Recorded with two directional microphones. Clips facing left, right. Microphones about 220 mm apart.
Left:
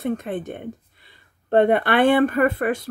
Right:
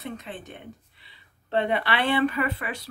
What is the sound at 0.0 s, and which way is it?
Speech, 50° left (ahead or behind).